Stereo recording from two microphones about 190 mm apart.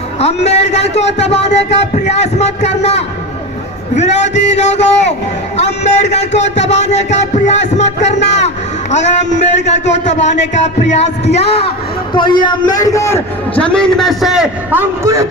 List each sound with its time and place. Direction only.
0.2 s speech: 35° left (ahead or behind)
12.4 s a man's voice: 20° left (ahead or behind); by 15.3 s 15° right (ahead or behind)